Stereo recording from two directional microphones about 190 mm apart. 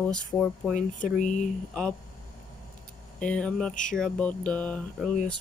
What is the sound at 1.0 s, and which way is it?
Speech, 40° left (ahead or behind).